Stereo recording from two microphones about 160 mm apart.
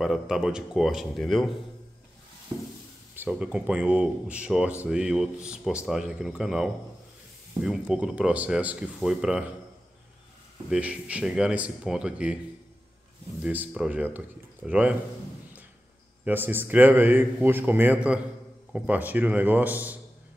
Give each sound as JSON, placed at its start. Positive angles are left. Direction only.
{"t": 0.0, "sound": "speech", "side_deg": -5}
{"t": 3.2, "sound": "a man's voice", "side_deg": -10}
{"t": 10.7, "sound": "a man's voice", "side_deg": -5}
{"t": 13.4, "sound": "a man's voice", "side_deg": -10}
{"t": 16.3, "sound": "a man's voice", "side_deg": -10}